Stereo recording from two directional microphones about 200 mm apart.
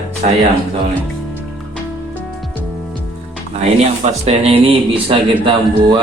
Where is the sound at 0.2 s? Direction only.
40° right (ahead or behind).